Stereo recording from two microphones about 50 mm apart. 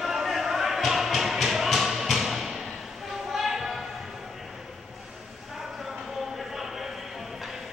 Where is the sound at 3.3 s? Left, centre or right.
Centre.